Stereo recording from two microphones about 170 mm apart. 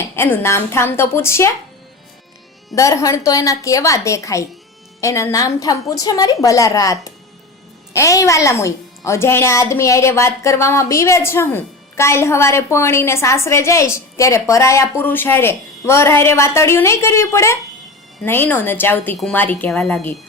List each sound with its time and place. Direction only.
0.0 s a woman's voice: 10° left (ahead or behind)
2.7 s a woman's voice: 20° left (ahead or behind)